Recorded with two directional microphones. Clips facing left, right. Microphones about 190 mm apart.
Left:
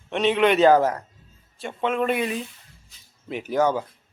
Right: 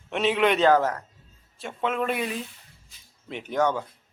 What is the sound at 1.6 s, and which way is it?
Speech, centre (ahead or behind).